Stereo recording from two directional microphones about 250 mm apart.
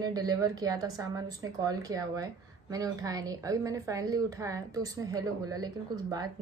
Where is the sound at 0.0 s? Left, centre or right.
Centre.